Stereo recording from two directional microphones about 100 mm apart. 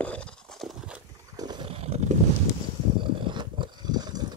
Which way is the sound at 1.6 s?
85° right.